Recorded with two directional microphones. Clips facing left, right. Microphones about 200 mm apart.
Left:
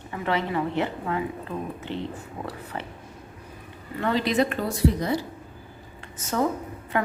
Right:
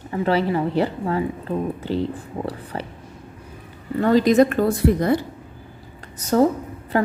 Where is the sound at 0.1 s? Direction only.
35° right (ahead or behind).